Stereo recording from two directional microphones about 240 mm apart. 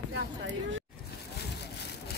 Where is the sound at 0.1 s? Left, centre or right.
Right.